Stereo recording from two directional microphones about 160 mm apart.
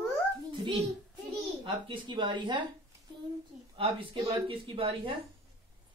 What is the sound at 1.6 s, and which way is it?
Speech, 30° right (ahead or behind).